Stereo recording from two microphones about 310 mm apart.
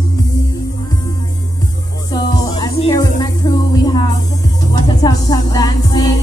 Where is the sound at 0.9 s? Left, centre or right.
Centre.